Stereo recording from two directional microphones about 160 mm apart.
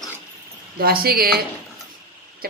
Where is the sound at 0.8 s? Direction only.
70° right (ahead or behind).